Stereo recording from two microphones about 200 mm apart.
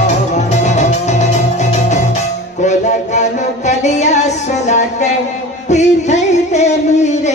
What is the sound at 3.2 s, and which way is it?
Music, 35° left (ahead or behind).